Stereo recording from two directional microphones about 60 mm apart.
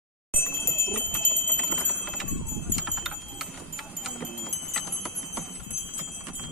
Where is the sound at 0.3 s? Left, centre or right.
Left.